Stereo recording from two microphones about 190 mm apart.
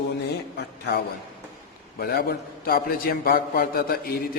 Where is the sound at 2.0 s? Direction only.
55° left (ahead or behind).